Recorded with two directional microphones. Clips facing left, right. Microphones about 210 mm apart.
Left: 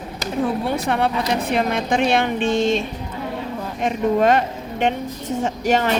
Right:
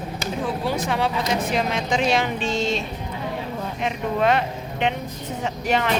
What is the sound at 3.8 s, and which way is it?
A woman's voice, 45° left (ahead or behind).